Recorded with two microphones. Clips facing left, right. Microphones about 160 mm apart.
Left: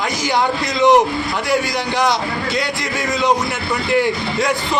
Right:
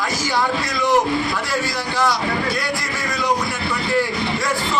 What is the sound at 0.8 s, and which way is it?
Speech, 20° left (ahead or behind).